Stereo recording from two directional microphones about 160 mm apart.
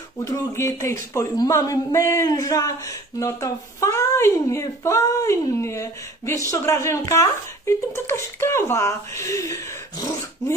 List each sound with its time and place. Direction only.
0.2 s speech: 20° left (ahead or behind)